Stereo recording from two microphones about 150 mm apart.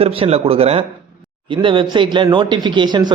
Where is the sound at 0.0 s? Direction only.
40° right (ahead or behind).